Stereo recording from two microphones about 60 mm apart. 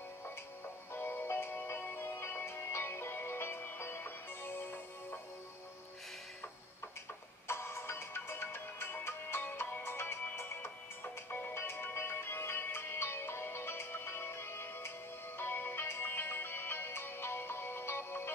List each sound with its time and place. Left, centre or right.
0.9 s music: left
7.4 s music: left
11.2 s music: left
11.5 s music: left